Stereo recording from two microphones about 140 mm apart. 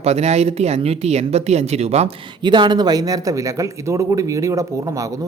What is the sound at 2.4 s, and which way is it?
Speech, 35° right (ahead or behind).